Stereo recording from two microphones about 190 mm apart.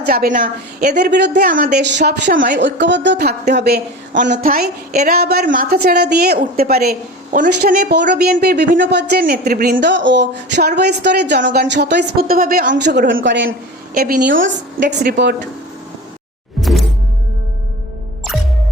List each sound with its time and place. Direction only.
0.0 s speech: 50° right (ahead or behind)
0.9 s speech: 60° right (ahead or behind)
1.5 s speech: 45° right (ahead or behind)
2.0 s speech: 65° right (ahead or behind)
2.3 s speech: 45° right (ahead or behind)
2.6 s speech: 70° right (ahead or behind)
4.1 s speech: 45° right (ahead or behind)
5.2 s speech: 55° right (ahead or behind)
7.9 s speech: 65° right (ahead or behind); by 9.7 s 45° right (ahead or behind)
9.7 s speech: 70° right (ahead or behind); by 12.7 s 50° right (ahead or behind)
12.7 s speech: 65° right (ahead or behind)
13.9 s speech: 55° right (ahead or behind)
16.6 s music: centre (ahead or behind)